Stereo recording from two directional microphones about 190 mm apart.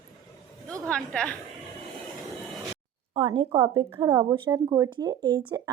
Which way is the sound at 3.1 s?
20° right (ahead or behind).